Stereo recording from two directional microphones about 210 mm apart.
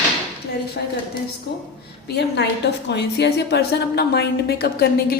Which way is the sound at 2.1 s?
50° left (ahead or behind).